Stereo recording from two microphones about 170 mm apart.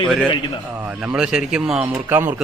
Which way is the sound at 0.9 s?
5° right (ahead or behind).